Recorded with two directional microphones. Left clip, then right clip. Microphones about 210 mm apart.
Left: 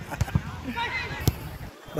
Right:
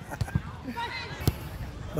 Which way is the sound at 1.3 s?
50° right (ahead or behind).